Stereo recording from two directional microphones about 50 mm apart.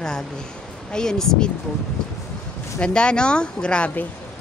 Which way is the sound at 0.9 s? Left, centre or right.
Centre.